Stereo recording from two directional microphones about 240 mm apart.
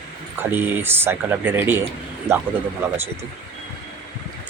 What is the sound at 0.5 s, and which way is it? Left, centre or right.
Speech, centre.